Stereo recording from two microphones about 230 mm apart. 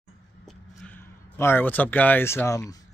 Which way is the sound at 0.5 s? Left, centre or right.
Centre.